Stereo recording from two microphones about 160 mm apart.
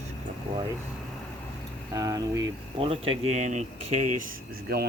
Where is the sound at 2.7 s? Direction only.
35° right (ahead or behind).